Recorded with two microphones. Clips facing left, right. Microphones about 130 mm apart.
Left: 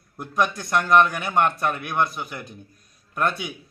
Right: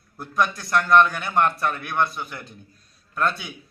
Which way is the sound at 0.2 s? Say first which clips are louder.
Even; 20° left (ahead or behind).